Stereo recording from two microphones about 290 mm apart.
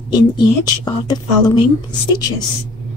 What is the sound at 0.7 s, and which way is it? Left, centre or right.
Speech, centre.